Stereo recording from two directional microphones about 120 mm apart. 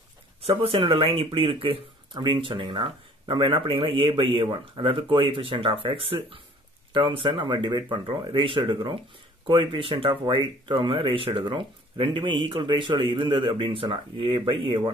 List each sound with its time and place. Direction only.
0.4 s speech: 50° right (ahead or behind)